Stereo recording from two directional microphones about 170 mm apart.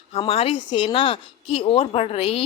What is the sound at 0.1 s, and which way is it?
A woman's voice, 35° left (ahead or behind).